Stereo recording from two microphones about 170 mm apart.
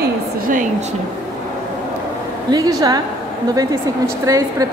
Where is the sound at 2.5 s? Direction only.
20° right (ahead or behind).